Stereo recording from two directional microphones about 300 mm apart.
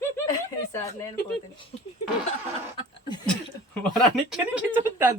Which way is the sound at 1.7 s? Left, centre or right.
Left.